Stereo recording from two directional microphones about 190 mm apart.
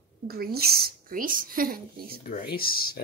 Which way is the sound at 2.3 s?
50° left (ahead or behind).